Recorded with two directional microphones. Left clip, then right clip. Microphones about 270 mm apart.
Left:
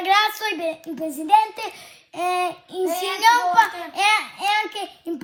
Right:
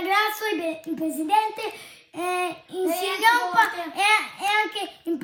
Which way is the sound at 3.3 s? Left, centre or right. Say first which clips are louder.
Left 5 dB; centre.